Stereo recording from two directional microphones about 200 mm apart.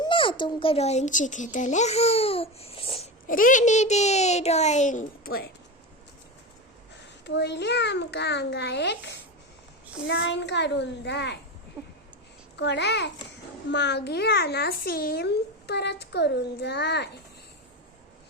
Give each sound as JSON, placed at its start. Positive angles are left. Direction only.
{"t": 0.0, "sound": "speech", "side_deg": 25}
{"t": 3.2, "sound": "speech", "side_deg": 45}
{"t": 7.3, "sound": "a child's voice", "side_deg": 60}
{"t": 11.8, "sound": "a sound", "side_deg": -15}
{"t": 12.5, "sound": "a child's voice", "side_deg": 60}